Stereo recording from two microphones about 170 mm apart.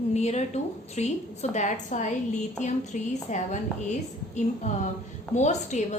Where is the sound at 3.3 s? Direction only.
45° left (ahead or behind).